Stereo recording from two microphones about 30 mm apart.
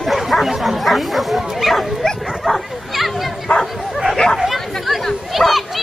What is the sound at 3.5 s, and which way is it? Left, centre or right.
Bow-wow, left.